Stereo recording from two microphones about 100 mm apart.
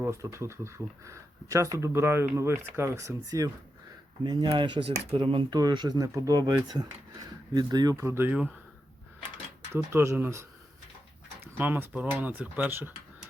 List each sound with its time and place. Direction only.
0.0 s speech: 30° right (ahead or behind)
4.2 s speech: 45° right (ahead or behind)
5.5 s speech: 45° right (ahead or behind); by 8.3 s 25° right (ahead or behind)
9.7 s speech: 25° right (ahead or behind)